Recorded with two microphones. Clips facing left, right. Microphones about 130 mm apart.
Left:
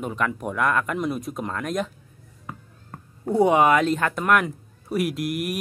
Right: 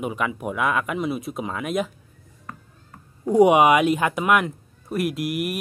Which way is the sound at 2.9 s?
50° left (ahead or behind).